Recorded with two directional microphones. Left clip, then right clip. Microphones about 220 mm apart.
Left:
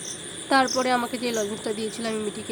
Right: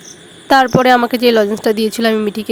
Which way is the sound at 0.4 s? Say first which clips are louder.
Right 12 dB; 45° right (ahead or behind).